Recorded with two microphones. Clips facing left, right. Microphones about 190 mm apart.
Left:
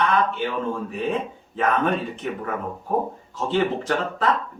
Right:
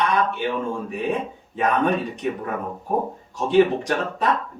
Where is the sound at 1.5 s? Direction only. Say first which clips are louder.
Right 1 dB; 15° right (ahead or behind).